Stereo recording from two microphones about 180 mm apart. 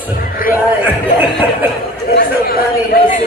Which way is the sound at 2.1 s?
60° left (ahead or behind).